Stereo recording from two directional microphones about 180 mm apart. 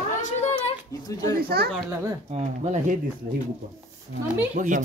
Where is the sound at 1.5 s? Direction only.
60° right (ahead or behind).